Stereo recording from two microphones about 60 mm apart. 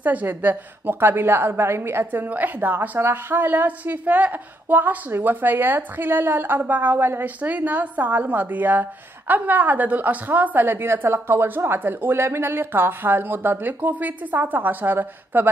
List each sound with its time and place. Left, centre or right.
0.0 s a woman's voice: right
2.2 s a woman's voice: right
3.0 s a woman's voice: right